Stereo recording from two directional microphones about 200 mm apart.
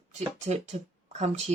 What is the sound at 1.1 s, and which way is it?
Speech, 35° right (ahead or behind).